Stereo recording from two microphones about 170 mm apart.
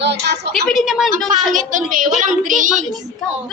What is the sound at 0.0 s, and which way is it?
Speech, 90° right.